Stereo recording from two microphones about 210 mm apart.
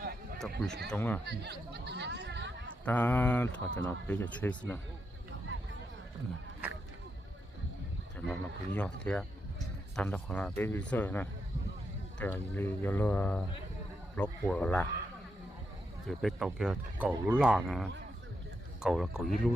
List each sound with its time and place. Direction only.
0.3 s speech: centre (ahead or behind)
1.2 s speech: 50° right (ahead or behind)
2.8 s speech: 10° left (ahead or behind)
5.5 s a sound: 65° right (ahead or behind)
8.1 s speech: 5° left (ahead or behind)
16.0 s speech: centre (ahead or behind)